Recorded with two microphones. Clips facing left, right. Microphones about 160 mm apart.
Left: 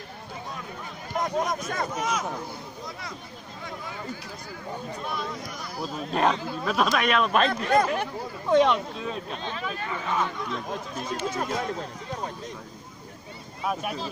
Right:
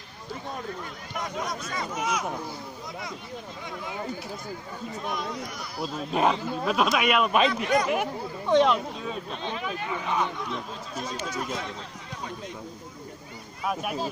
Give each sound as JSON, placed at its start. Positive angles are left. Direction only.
{"t": 1.2, "sound": "speech", "side_deg": 50}
{"t": 2.0, "sound": "speech", "side_deg": -10}
{"t": 5.8, "sound": "speech", "side_deg": -5}
{"t": 7.4, "sound": "speech", "side_deg": 50}
{"t": 7.9, "sound": "speech", "side_deg": -5}
{"t": 9.5, "sound": "speech", "side_deg": -10}
{"t": 13.7, "sound": "speech", "side_deg": -5}